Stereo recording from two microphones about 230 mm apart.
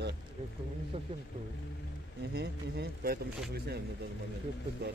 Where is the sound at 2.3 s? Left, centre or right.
Right.